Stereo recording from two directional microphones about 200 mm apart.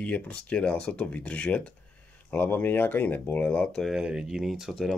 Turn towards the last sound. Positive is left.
turn(degrees=0)  # may be behind; listen again after turning